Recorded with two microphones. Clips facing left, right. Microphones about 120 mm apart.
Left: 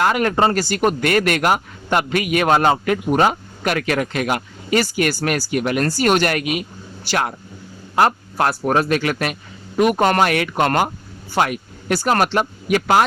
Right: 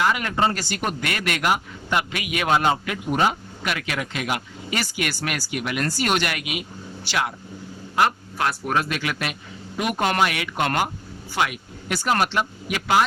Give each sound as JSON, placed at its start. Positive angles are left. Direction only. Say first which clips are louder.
{"t": 0.0, "sound": "speech", "louder": "left 5 dB", "side_deg": 50}